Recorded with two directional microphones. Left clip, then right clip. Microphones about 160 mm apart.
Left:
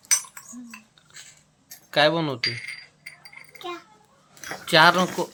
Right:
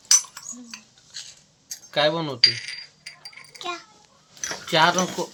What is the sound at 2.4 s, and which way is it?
Speech, 25° left (ahead or behind).